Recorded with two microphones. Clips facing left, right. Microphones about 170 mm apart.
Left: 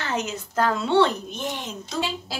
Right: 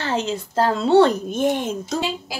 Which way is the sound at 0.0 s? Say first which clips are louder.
Right 5 dB; 30° right (ahead or behind).